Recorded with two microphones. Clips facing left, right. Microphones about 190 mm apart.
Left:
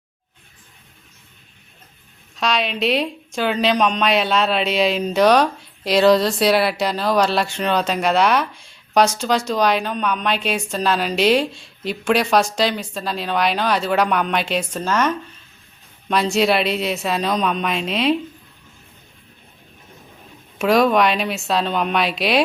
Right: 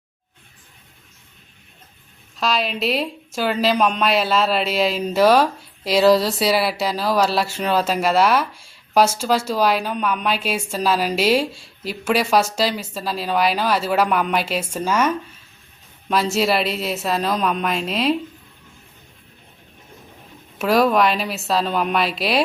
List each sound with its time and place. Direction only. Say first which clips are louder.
2.3 s a woman's voice: left 1 dB; centre (ahead or behind)
20.6 s a woman's voice: left 1 dB; centre (ahead or behind)